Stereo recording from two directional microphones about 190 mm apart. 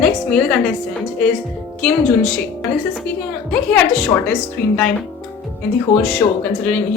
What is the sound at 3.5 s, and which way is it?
Speech, 10° left (ahead or behind).